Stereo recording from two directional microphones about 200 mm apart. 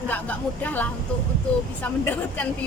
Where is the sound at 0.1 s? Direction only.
10° left (ahead or behind).